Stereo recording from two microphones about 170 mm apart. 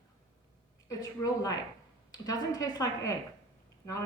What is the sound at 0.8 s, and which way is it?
A woman's voice, 20° left (ahead or behind).